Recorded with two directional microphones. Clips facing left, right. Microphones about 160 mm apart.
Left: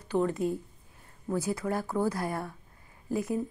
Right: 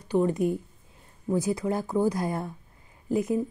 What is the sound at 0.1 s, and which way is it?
A woman's voice, 15° right (ahead or behind).